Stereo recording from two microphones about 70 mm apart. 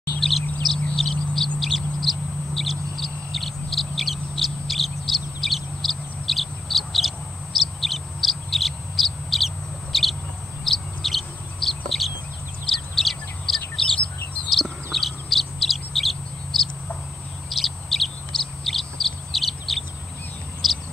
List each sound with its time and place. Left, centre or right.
0.1 s bird: left
0.7 s a sound: centre
1.6 s bird: centre
7.8 s owl: centre
9.9 s bird: centre